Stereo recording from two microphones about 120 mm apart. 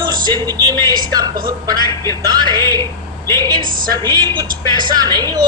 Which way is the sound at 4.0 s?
40° right (ahead or behind).